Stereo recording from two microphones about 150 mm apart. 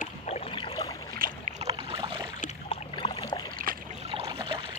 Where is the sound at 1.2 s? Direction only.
75° right (ahead or behind).